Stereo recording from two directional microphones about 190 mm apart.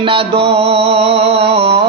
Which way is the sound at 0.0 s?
30° right (ahead or behind).